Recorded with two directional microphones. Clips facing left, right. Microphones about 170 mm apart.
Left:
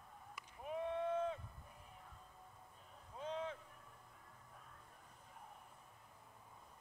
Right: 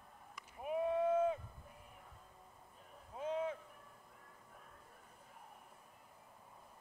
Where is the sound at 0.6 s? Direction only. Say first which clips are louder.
Right 6 dB; 10° right (ahead or behind).